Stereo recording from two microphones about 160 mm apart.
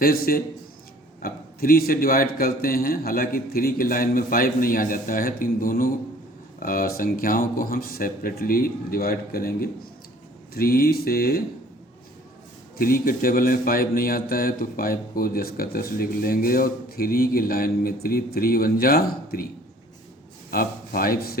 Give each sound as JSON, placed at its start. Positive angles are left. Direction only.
{"t": 0.0, "sound": "speech", "side_deg": 65}
{"t": 12.7, "sound": "speech", "side_deg": 65}
{"t": 20.5, "sound": "speech", "side_deg": 65}